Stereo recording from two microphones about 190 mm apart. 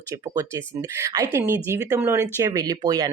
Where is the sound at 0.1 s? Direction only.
15° right (ahead or behind).